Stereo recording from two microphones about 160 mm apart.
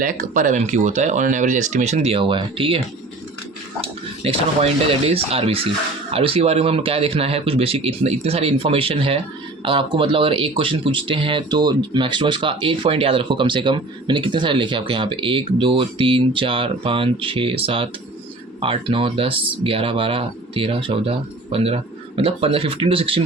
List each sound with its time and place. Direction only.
0.0 s speech: 55° right (ahead or behind); by 23.2 s 35° right (ahead or behind)